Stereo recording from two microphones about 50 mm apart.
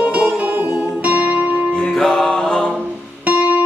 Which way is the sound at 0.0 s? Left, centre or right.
Right.